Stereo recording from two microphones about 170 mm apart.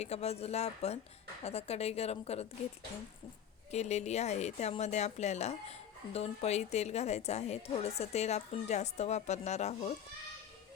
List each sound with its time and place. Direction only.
0.0 s a woman's voice: 40° left (ahead or behind)
3.7 s a woman's voice: 40° left (ahead or behind)